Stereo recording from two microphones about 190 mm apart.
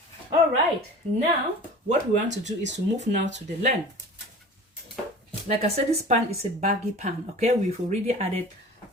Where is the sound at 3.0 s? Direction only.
35° right (ahead or behind).